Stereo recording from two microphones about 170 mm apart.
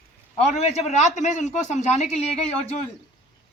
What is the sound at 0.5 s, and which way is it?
Speech, 40° left (ahead or behind).